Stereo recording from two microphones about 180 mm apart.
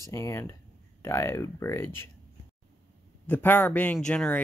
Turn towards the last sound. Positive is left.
turn(degrees=5)  # may be behind; listen again after turning